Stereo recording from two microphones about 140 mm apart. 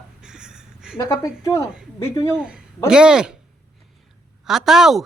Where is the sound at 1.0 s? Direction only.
20° left (ahead or behind).